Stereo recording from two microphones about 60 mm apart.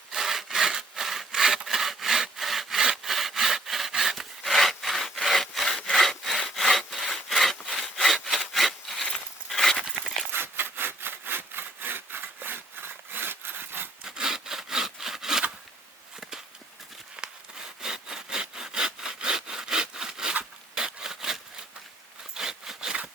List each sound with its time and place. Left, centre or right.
0.1 s sawing: centre
8.5 s wood: centre
9.5 s a sound: centre
10.3 s sawing: right
14.0 s sawing: centre
17.2 s sawing: centre
20.7 s a sound: centre